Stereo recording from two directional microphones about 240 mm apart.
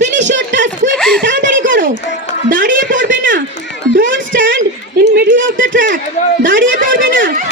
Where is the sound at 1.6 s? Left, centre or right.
Right.